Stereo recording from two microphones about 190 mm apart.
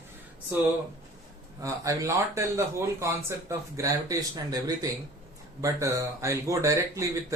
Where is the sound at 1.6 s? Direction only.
15° right (ahead or behind).